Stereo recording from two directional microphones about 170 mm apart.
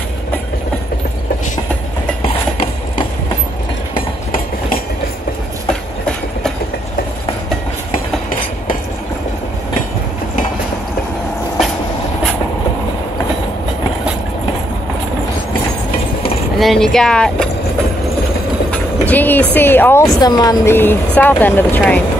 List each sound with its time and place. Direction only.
2.2 s a sound: 35° left (ahead or behind)
4.3 s train: 55° left (ahead or behind)
16.5 s speech: centre (ahead or behind)
18.7 s train: 10° left (ahead or behind)
19.5 s speech: 10° left (ahead or behind)